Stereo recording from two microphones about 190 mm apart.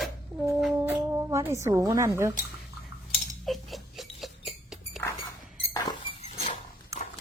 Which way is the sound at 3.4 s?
Centre (ahead or behind).